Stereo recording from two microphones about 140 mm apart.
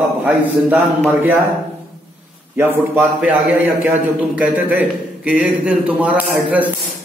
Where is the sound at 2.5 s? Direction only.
15° right (ahead or behind).